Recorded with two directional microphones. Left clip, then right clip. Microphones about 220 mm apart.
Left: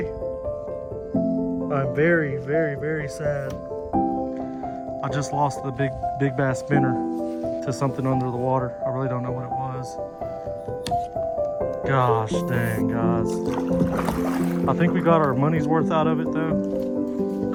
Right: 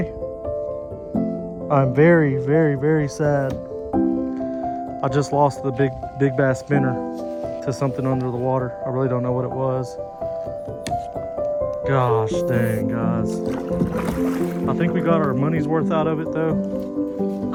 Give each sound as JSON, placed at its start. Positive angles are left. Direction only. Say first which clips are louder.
{"t": 1.7, "sound": "speech", "louder": "right 6 dB", "side_deg": -20}
{"t": 5.0, "sound": "speech", "louder": "right 6 dB", "side_deg": -5}
{"t": 11.9, "sound": "speech", "louder": "right 1 dB", "side_deg": 5}
{"t": 13.2, "sound": "speech", "louder": "even", "side_deg": 35}
{"t": 14.2, "sound": "speech", "louder": "right 2 dB", "side_deg": 15}